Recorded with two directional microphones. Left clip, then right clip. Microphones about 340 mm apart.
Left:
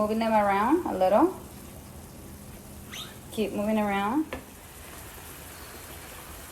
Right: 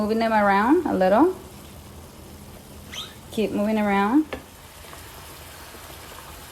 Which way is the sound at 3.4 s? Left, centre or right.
Right.